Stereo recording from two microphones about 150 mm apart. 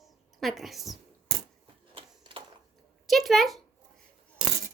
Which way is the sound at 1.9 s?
35° right (ahead or behind).